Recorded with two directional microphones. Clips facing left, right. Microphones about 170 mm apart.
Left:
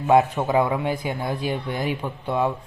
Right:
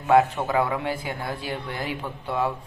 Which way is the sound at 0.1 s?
20° left (ahead or behind).